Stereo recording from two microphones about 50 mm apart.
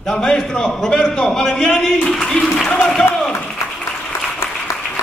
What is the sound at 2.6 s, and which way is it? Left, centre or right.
Crowd, left.